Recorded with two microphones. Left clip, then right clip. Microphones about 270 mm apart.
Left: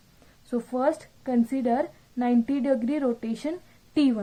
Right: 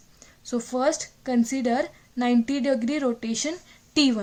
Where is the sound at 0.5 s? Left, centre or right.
Right.